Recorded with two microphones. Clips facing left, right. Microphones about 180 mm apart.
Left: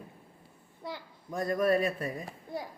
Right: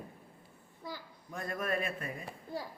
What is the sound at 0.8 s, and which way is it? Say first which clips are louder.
Speech: left 4 dB; 70° left (ahead or behind).